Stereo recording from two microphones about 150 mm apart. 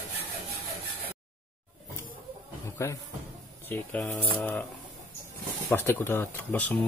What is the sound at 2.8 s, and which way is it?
Speech, 20° left (ahead or behind).